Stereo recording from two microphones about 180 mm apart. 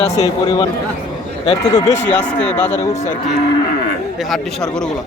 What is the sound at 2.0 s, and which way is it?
Speech, 10° left (ahead or behind).